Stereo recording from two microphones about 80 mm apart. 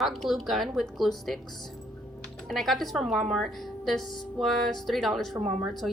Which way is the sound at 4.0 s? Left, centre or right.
Left.